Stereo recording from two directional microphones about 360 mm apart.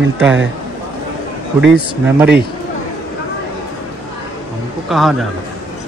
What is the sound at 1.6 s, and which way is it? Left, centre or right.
Speech, centre.